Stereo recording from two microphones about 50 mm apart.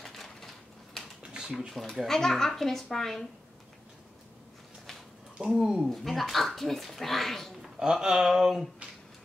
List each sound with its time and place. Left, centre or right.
0.0 s a sound: centre
1.2 s a sound: centre
1.7 s speech: centre
5.4 s speech: right
5.9 s speech: centre
7.8 s speech: centre